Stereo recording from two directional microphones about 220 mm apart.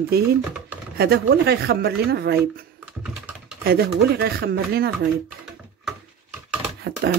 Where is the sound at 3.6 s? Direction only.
45° right (ahead or behind).